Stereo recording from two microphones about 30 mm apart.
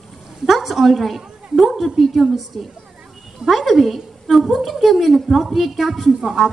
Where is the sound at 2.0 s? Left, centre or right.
Centre.